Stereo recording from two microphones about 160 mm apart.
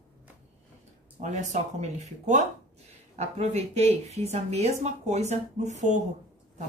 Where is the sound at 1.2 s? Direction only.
50° right (ahead or behind).